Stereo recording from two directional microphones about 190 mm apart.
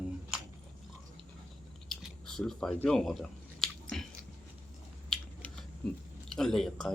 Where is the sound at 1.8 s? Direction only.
Centre (ahead or behind).